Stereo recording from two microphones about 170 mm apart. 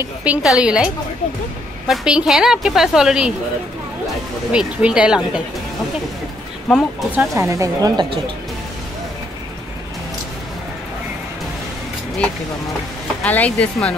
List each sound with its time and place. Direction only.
0.0 s a woman's voice: 10° right (ahead or behind)
4.5 s a woman's voice: 5° right (ahead or behind)
7.2 s speech: 20° right (ahead or behind)
13.2 s speech: 10° left (ahead or behind)